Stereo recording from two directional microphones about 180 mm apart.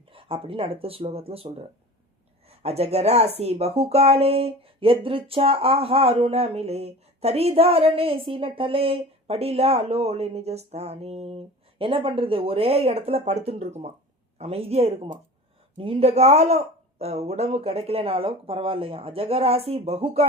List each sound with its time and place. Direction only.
0.1 s speech: 30° right (ahead or behind)